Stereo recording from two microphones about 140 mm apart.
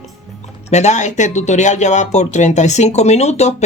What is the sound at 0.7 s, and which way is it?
Speech, 55° left (ahead or behind).